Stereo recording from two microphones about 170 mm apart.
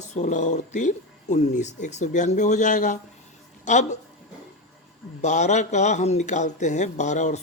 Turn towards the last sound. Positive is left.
turn(degrees=45)  # may be behind; listen again after turning